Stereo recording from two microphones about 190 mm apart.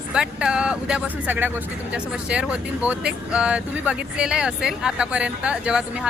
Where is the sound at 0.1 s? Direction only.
5° right (ahead or behind).